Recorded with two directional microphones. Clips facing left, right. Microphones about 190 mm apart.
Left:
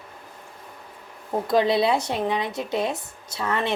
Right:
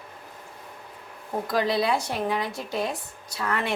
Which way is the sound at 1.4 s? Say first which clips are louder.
Left 4 dB; 25° left (ahead or behind).